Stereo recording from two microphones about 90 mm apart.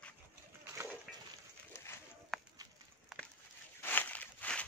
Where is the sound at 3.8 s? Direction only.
20° left (ahead or behind).